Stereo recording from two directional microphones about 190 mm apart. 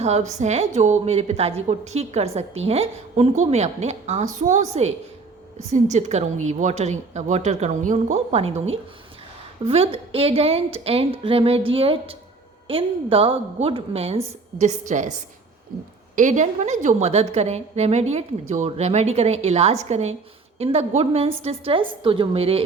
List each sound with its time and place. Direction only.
0.0 s a woman's voice: 35° right (ahead or behind)
9.6 s a woman's voice: 30° right (ahead or behind)
16.1 s a woman's voice: 40° right (ahead or behind)